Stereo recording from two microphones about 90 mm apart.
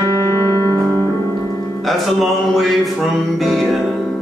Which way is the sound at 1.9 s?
Centre (ahead or behind).